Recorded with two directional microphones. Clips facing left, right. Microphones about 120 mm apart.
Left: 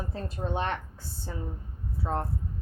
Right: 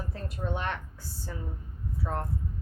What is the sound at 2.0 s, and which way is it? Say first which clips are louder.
Speech: left 3 dB; 25° left (ahead or behind).